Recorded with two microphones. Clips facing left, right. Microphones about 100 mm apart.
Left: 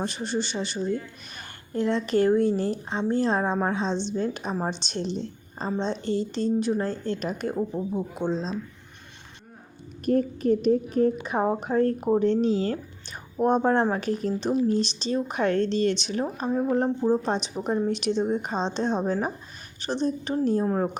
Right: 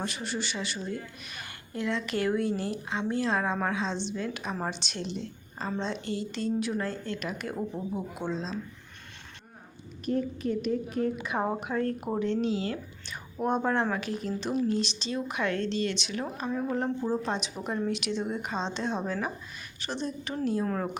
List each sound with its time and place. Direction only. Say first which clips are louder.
0.0 s a woman's voice: left 5 dB; 35° left (ahead or behind)
7.7 s speech: left 5 dB; centre (ahead or behind)
8.1 s speech: left 5 dB; 35° left (ahead or behind)
10.1 s speech: left 7 dB; 45° left (ahead or behind)